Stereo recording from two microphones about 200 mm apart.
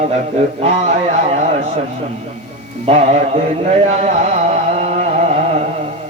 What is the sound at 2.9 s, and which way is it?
Music, 30° right (ahead or behind).